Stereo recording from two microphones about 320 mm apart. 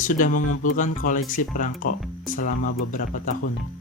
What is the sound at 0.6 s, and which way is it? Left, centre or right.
Speech, left.